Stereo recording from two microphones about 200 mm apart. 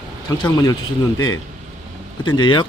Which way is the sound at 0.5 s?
20° left (ahead or behind).